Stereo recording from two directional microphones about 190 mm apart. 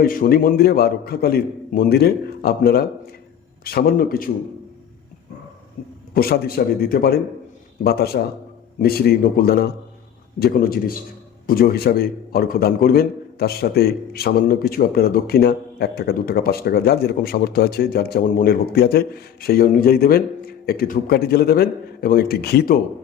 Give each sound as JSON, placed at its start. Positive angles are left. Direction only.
{"t": 0.0, "sound": "a man's voice", "side_deg": 50}
{"t": 6.1, "sound": "a man's voice", "side_deg": 55}